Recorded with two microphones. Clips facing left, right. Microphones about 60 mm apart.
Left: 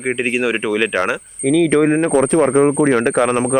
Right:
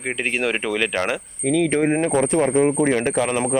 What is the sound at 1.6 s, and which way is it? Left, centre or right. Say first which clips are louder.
Speech: left 6 dB; left.